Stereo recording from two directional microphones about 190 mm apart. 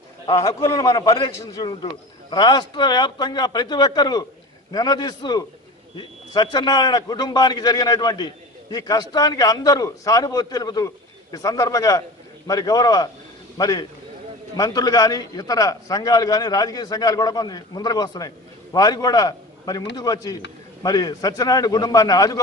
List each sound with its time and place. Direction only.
0.3 s a man's voice: 20° left (ahead or behind)